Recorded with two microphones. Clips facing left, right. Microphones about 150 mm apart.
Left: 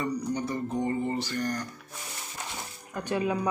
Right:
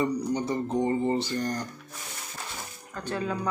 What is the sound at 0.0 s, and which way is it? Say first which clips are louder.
Speech: right 3 dB; 25° right (ahead or behind).